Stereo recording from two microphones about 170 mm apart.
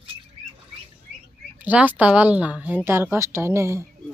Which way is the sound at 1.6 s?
10° right (ahead or behind).